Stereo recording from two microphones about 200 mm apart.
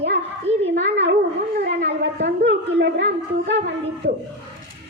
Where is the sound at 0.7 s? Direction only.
65° right (ahead or behind).